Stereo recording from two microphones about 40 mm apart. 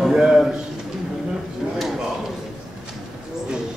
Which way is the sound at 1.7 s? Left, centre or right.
Centre.